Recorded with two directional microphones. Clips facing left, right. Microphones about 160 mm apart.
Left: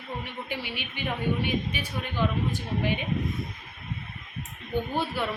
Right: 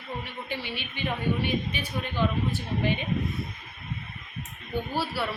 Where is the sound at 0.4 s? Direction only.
15° left (ahead or behind).